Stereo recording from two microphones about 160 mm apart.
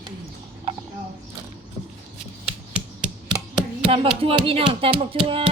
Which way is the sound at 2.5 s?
5° right (ahead or behind).